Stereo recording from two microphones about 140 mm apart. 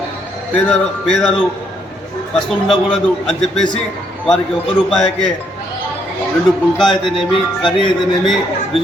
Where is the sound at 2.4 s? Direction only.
Centre (ahead or behind).